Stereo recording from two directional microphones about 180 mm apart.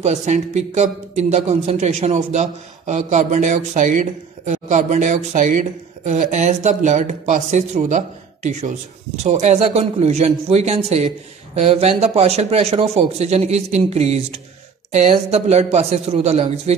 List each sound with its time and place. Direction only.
0.0 s speech: 40° right (ahead or behind)